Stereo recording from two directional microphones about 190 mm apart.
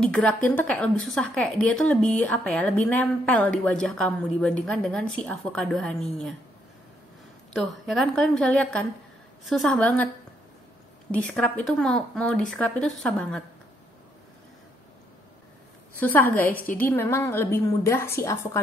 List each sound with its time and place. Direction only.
0.0 s a woman's voice: 5° left (ahead or behind)
7.5 s a woman's voice: centre (ahead or behind)
11.1 s a woman's voice: 5° left (ahead or behind)
16.0 s a woman's voice: 10° left (ahead or behind)